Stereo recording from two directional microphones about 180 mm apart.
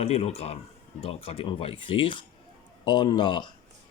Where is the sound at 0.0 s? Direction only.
35° left (ahead or behind).